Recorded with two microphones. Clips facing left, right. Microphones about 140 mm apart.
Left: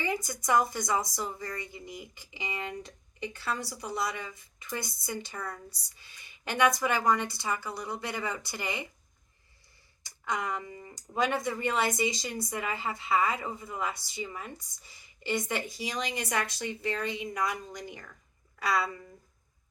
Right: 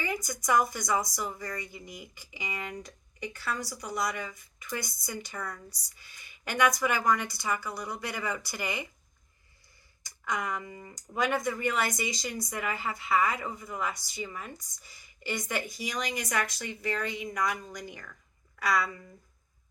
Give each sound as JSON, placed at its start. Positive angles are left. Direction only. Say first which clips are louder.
{"t": 0.0, "sound": "a woman's voice", "louder": "left 1 dB", "side_deg": 25}
{"t": 10.0, "sound": "a woman's voice", "louder": "even", "side_deg": 30}